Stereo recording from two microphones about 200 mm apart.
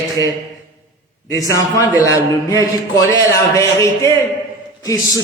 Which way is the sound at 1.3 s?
15° left (ahead or behind).